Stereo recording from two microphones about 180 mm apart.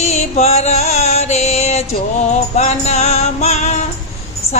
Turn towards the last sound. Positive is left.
turn(degrees=40)  # may be behind; listen again after turning